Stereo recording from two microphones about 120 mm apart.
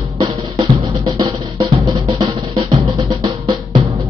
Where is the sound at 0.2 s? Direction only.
40° right (ahead or behind).